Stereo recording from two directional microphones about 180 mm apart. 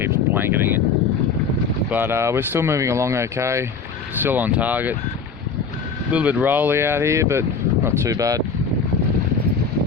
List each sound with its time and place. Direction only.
0.0 s vehicle: 10° right (ahead or behind)
1.9 s speech: 10° right (ahead or behind)
6.1 s speech: 10° right (ahead or behind)